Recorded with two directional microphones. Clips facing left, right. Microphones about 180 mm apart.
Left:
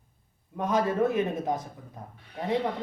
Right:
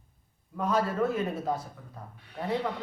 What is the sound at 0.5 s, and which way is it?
Speech, 20° left (ahead or behind).